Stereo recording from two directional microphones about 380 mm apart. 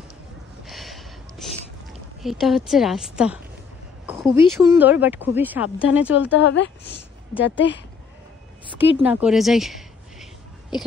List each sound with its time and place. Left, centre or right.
0.7 s a sound: centre
2.2 s speech: centre
4.0 s a sound: centre
4.6 s speech: centre
6.3 s a woman's voice: left
8.7 s speech: centre